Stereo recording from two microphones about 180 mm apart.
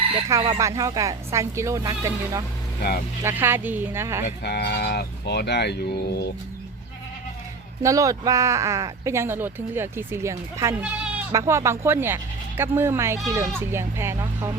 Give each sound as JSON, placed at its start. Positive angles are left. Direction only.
{"t": 0.3, "sound": "speech", "side_deg": -20}
{"t": 4.4, "sound": "speech", "side_deg": 65}
{"t": 7.8, "sound": "speech", "side_deg": -20}